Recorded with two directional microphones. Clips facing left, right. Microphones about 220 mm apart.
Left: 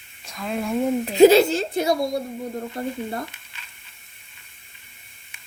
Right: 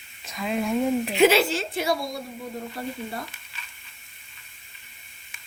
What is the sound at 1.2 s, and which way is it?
Speech, 40° left (ahead or behind).